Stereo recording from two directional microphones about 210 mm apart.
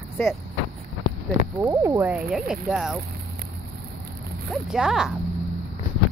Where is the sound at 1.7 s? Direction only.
15° right (ahead or behind).